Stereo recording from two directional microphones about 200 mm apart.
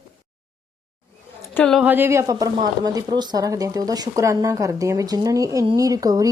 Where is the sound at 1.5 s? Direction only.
Centre (ahead or behind).